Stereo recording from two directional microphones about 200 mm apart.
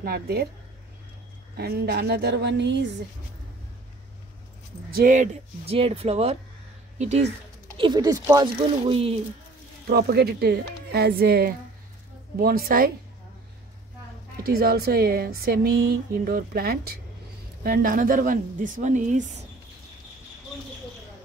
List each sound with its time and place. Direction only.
0.0 s speech: 50° right (ahead or behind)
1.6 s a woman's voice: 50° right (ahead or behind)
4.9 s a woman's voice: 40° right (ahead or behind)
9.8 s speech: 50° right (ahead or behind)
14.4 s a woman's voice: 50° right (ahead or behind)